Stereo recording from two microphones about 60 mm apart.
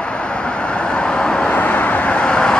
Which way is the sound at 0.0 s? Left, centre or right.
Centre.